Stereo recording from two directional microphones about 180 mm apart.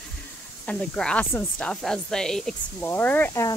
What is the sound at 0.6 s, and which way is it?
Speech, 5° left (ahead or behind).